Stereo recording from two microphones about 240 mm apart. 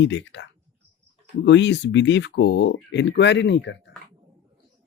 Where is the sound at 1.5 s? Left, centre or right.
Left.